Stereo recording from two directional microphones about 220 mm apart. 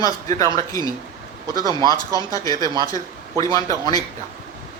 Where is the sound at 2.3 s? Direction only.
15° left (ahead or behind).